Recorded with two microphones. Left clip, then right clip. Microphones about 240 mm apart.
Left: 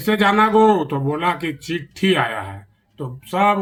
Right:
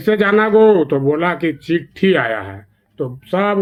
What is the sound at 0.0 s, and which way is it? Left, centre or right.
Speech, left.